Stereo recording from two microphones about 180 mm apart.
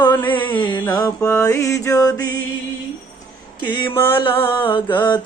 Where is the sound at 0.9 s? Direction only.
20° left (ahead or behind).